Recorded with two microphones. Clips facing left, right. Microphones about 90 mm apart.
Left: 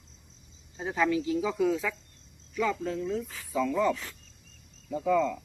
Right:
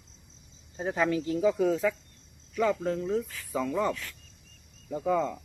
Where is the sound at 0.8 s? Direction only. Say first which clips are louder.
Even; 40° right (ahead or behind).